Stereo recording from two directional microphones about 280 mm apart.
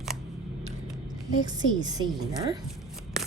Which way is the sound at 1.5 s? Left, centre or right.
Centre.